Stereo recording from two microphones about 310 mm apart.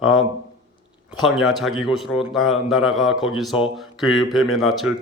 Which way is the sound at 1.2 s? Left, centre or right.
Centre.